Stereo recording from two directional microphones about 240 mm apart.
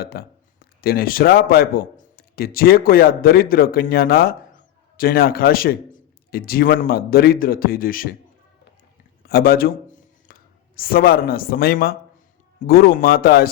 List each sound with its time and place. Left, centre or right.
0.0 s a man's voice: left
9.2 s a sound: left
10.8 s speech: left